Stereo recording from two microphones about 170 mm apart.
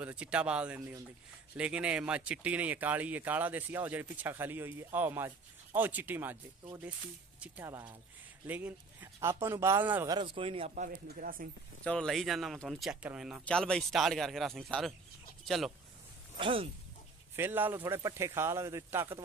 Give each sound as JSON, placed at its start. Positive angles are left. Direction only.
{"t": 0.0, "sound": "speech", "side_deg": -5}
{"t": 0.7, "sound": "speech", "side_deg": -15}
{"t": 1.6, "sound": "speech", "side_deg": -5}
{"t": 7.3, "sound": "speech", "side_deg": -10}
{"t": 10.1, "sound": "speech", "side_deg": -30}
{"t": 10.7, "sound": "speech", "side_deg": -55}
{"t": 11.8, "sound": "speech", "side_deg": 5}
{"t": 13.5, "sound": "speech", "side_deg": 5}
{"t": 16.3, "sound": "speech", "side_deg": -30}
{"t": 17.4, "sound": "speech", "side_deg": -10}